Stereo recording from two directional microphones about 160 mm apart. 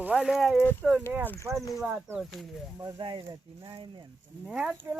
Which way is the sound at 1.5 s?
10° right (ahead or behind).